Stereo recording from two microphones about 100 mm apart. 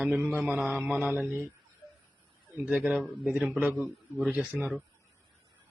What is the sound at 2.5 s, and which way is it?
A man's voice, 15° right (ahead or behind).